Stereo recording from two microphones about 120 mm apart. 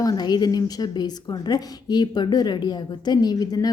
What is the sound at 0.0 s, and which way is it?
Speech, 35° left (ahead or behind).